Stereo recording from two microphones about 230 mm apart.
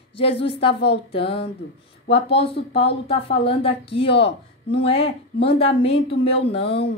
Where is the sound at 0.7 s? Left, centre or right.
Left.